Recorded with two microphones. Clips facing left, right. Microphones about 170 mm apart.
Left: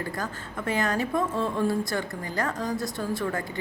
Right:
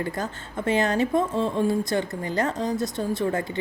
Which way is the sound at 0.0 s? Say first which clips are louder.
Right 3 dB; 25° right (ahead or behind).